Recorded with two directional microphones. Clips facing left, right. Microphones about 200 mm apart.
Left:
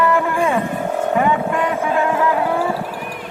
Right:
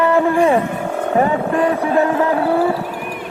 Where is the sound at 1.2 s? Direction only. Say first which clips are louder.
Right 5 dB; 40° right (ahead or behind).